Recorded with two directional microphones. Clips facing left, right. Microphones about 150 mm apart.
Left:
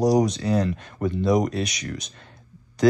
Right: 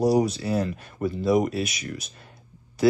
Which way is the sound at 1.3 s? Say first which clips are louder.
Even; 5° right (ahead or behind).